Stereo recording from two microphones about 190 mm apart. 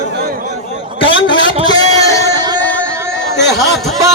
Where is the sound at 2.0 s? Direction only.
15° left (ahead or behind).